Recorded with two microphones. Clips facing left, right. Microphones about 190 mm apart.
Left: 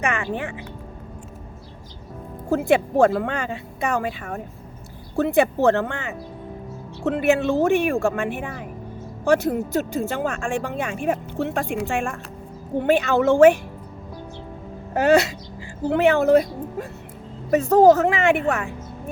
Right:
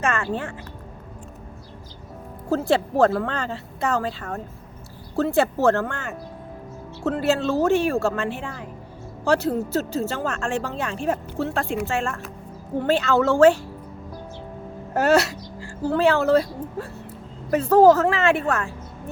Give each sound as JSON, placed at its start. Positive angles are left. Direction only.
{"t": 0.0, "sound": "a woman's voice", "side_deg": 15}
{"t": 2.5, "sound": "a woman's voice", "side_deg": 15}
{"t": 14.9, "sound": "a woman's voice", "side_deg": 15}